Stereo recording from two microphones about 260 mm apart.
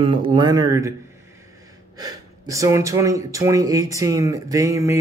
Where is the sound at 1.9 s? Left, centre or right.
Centre.